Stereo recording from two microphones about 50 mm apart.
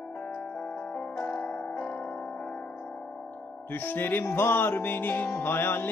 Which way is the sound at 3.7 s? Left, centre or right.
Left.